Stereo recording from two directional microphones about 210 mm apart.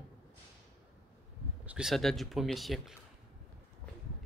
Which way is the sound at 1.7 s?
Centre (ahead or behind).